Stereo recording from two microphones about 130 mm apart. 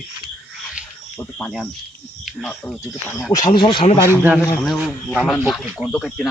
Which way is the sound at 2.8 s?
20° left (ahead or behind).